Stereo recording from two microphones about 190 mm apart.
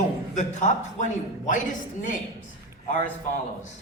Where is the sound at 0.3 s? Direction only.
40° left (ahead or behind).